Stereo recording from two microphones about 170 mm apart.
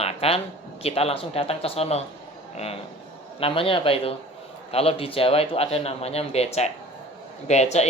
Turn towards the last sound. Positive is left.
turn(degrees=40)  # may be behind; listen again after turning